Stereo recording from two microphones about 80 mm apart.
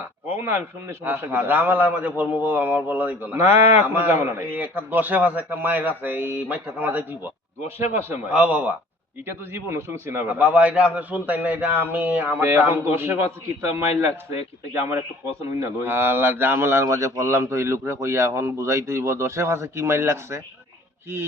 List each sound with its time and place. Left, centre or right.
0.0 s a man's voice: right
3.3 s a man's voice: right
4.5 s a man's voice: right
8.3 s speech: centre
9.2 s a man's voice: right
10.2 s a man's voice: centre
15.4 s a man's voice: right